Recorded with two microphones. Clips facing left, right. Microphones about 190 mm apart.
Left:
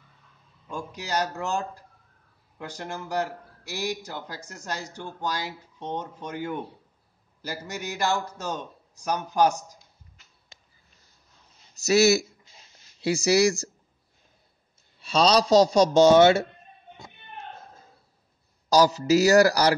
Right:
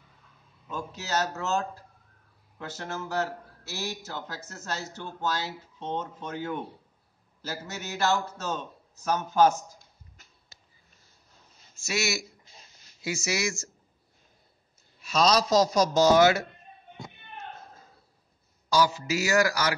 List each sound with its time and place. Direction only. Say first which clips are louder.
0.7 s a man's voice: left 1 dB; 15° left (ahead or behind)
11.7 s a man's voice: left 11 dB; 40° left (ahead or behind)
15.0 s a man's voice: left 3 dB; 30° left (ahead or behind)
18.7 s a man's voice: left 6 dB; 35° left (ahead or behind)